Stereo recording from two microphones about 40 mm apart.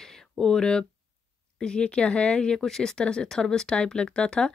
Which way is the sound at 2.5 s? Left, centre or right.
Centre.